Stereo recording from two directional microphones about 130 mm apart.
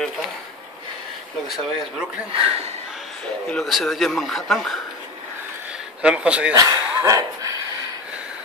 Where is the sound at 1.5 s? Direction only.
5° right (ahead or behind).